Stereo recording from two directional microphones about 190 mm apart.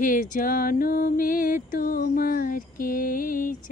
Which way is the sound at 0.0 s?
45° left (ahead or behind).